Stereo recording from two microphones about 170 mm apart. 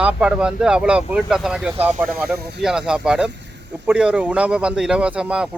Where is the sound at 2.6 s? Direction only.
5° right (ahead or behind).